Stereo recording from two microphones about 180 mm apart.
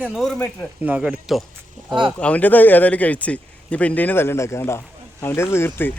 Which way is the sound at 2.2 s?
5° left (ahead or behind).